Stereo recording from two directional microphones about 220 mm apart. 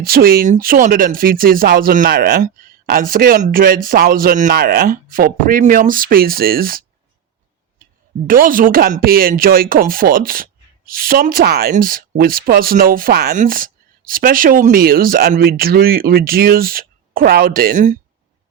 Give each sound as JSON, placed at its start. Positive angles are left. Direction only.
{"t": 0.0, "sound": "speech", "side_deg": -40}
{"t": 8.3, "sound": "speech", "side_deg": -40}